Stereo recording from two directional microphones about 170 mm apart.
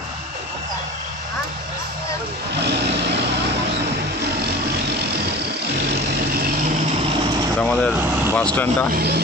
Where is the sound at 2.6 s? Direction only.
80° right.